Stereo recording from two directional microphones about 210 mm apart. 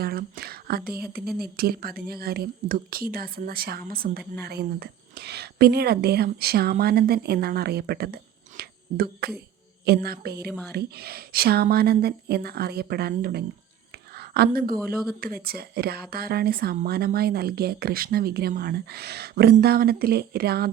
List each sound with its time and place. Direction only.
0.0 s whispering: 45° right (ahead or behind)
0.9 s a woman's voice: 45° right (ahead or behind)
13.9 s a sound: 50° right (ahead or behind)
15.2 s a woman's voice: 45° right (ahead or behind)